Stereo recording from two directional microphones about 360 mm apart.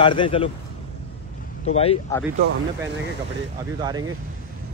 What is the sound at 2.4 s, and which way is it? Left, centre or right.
Speech, right.